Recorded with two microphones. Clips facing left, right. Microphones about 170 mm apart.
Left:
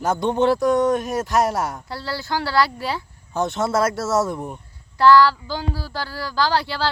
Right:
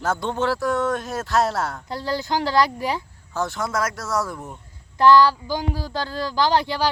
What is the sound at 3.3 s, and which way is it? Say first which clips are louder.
Speech: left 4 dB; 20° left (ahead or behind).